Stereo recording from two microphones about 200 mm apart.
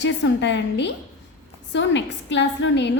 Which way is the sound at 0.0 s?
60° left (ahead or behind).